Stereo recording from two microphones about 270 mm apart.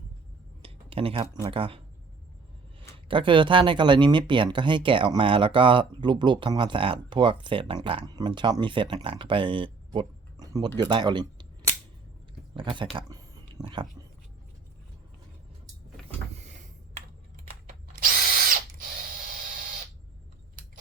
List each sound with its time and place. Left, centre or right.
0.6 s speech: right
3.1 s speech: centre
9.9 s a sound: centre
10.8 s speech: centre
12.5 s a sound: centre
18.0 s drill: right